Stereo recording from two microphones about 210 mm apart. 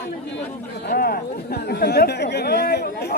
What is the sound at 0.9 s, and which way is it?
Speech, 45° left (ahead or behind).